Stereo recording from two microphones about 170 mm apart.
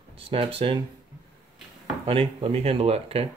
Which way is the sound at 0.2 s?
35° right (ahead or behind).